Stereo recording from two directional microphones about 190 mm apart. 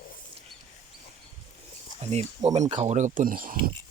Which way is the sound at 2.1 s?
35° right (ahead or behind).